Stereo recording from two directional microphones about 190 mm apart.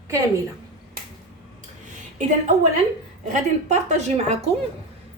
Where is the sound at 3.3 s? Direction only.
35° right (ahead or behind).